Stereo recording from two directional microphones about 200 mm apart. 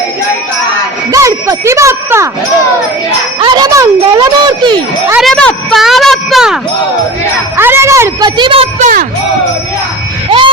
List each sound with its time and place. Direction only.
1.1 s ding: 15° right (ahead or behind)
3.4 s a child's voice: 20° right (ahead or behind)
5.1 s a child's voice: centre (ahead or behind); by 8.9 s 25° right (ahead or behind)